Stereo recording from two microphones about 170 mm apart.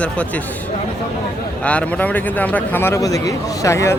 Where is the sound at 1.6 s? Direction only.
10° left (ahead or behind).